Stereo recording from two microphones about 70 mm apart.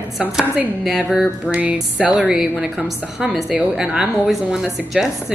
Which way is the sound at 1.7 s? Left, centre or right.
Centre.